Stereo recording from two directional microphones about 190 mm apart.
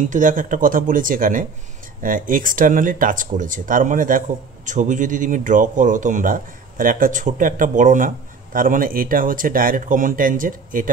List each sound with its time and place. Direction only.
0.1 s speech: 45° right (ahead or behind)